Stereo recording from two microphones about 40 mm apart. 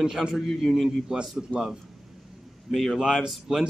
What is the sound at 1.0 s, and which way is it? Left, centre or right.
Speech, centre.